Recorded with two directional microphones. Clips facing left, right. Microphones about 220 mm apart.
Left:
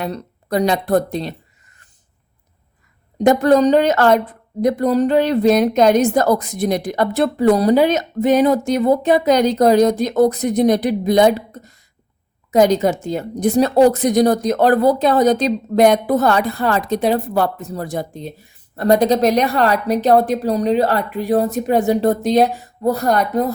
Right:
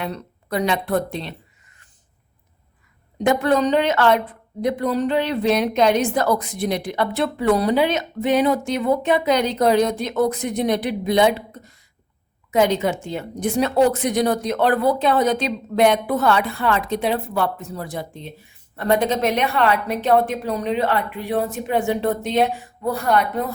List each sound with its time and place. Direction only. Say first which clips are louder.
0.0 s a woman's voice: left 4 dB; 40° left (ahead or behind)
3.2 s a woman's voice: left 6 dB; 40° left (ahead or behind)